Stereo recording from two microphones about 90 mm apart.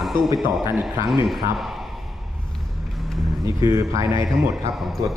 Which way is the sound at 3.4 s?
35° right (ahead or behind).